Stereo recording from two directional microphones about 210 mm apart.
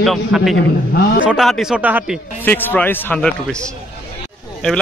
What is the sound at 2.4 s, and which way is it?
A man's voice, 10° left (ahead or behind).